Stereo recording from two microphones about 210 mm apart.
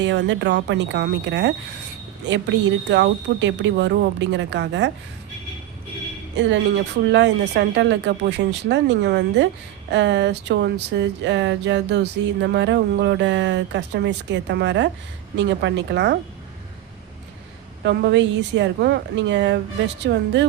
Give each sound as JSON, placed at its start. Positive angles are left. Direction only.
{"t": 0.0, "sound": "speech", "side_deg": -60}
{"t": 6.3, "sound": "speech", "side_deg": -60}
{"t": 17.8, "sound": "speech", "side_deg": -55}